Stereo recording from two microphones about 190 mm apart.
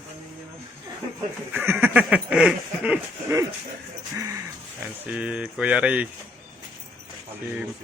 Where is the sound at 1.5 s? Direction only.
10° right (ahead or behind).